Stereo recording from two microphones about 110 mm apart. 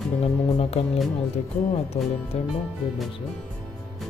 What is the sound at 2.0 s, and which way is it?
Speech, 60° left (ahead or behind).